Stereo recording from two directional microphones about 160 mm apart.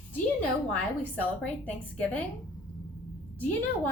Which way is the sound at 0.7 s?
10° left (ahead or behind).